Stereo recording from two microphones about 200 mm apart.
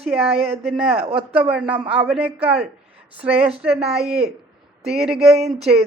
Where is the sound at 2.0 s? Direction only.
5° right (ahead or behind).